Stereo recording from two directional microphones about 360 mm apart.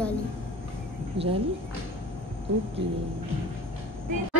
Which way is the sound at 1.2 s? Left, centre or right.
Right.